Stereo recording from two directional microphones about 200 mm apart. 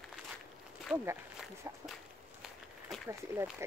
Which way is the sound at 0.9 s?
5° right (ahead or behind).